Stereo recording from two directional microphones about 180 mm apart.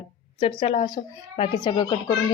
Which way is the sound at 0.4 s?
30° left (ahead or behind).